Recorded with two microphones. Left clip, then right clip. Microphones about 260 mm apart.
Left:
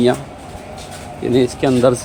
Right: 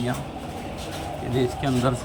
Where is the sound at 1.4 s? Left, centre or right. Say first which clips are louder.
Left 10 dB; left.